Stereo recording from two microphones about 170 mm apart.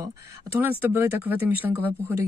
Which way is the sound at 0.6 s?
10° right (ahead or behind).